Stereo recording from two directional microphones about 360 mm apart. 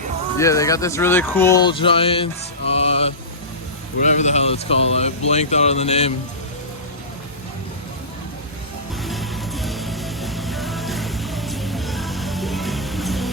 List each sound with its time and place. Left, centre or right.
0.3 s speech: centre
9.0 s music: centre